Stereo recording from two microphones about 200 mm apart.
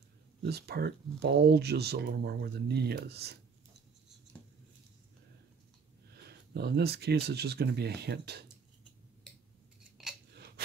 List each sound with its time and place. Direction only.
0.4 s speech: 55° right (ahead or behind)
6.2 s speech: 55° right (ahead or behind)
10.0 s biting: centre (ahead or behind)